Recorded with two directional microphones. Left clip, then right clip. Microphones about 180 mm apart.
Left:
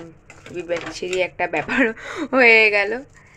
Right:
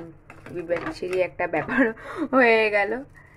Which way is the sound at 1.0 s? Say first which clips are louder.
Left 5 dB; centre (ahead or behind).